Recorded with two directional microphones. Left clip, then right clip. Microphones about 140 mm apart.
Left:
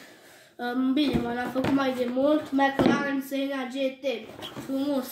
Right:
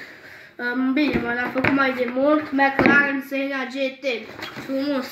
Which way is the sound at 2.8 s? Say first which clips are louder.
Right 9 dB; 35° left (ahead or behind).